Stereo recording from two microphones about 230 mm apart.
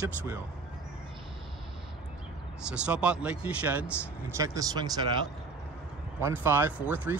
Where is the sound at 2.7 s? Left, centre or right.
Centre.